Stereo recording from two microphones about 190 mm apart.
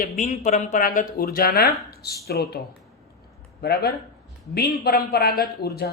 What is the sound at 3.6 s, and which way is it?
Speech, 55° left (ahead or behind).